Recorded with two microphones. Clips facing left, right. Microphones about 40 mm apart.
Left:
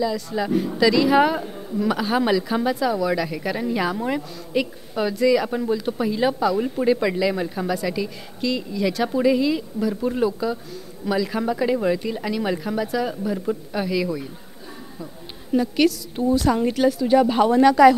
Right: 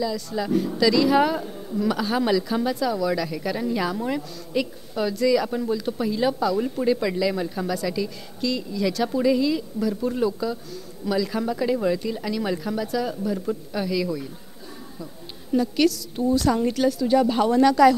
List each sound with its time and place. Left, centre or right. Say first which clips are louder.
0.0 s a woman's voice: left 3 dB; left
15.5 s a woman's voice: left 1 dB; left